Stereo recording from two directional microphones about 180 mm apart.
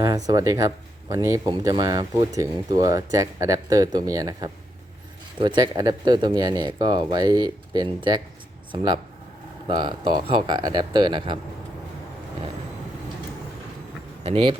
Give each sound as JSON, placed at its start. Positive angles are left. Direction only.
{"t": 0.0, "sound": "speech", "side_deg": -20}
{"t": 14.3, "sound": "speech", "side_deg": -30}